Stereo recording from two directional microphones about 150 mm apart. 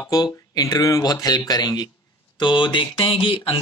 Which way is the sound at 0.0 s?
25° left (ahead or behind).